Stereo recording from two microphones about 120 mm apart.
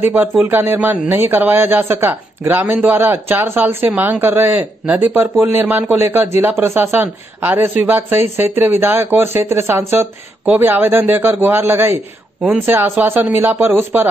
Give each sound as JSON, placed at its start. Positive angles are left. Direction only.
{"t": 0.0, "sound": "a man's voice", "side_deg": -15}